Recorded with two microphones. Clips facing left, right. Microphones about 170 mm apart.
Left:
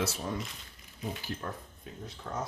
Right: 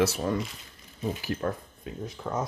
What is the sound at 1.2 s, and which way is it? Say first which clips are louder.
Speech: right 8 dB; 90° right.